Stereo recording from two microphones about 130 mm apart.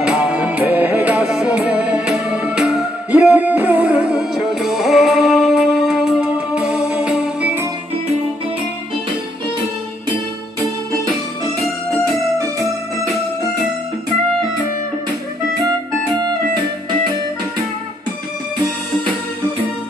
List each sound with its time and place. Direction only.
0.0 s music: 10° right (ahead or behind)
12.0 s music: 25° right (ahead or behind)